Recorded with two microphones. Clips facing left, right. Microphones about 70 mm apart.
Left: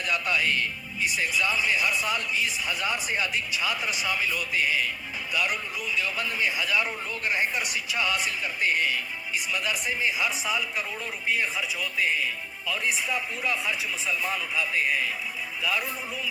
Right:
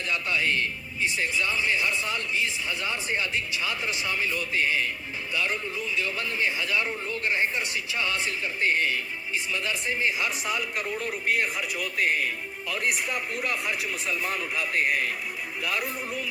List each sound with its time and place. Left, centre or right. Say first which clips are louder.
0.3 s speech: right 2 dB; right
2.6 s speech: left 2 dB; left
3.8 s speech: even; right
6.6 s speech: left 1 dB; centre
8.0 s speech: left 1 dB; right
9.5 s speech: left 1 dB; centre
10.2 s speech: left 1 dB; centre
11.8 s speech: right 2 dB; right
12.9 s speech: even; centre